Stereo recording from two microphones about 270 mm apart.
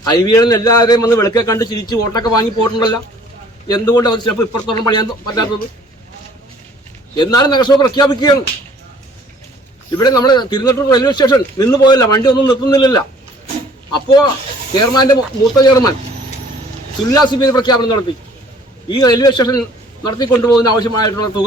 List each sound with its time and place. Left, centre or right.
0.0 s a man's voice: centre
7.2 s a man's voice: centre
10.0 s a man's voice: centre
17.1 s a man's voice: centre